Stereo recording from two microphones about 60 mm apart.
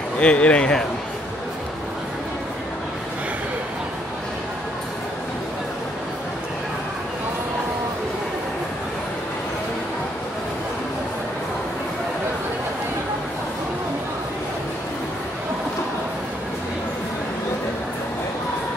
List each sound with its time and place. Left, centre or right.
0.2 s speech: centre